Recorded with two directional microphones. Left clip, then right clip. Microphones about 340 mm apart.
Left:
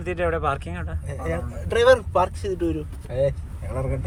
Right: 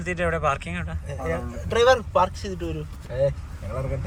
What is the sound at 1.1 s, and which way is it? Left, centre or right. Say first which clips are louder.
Speech: even; left.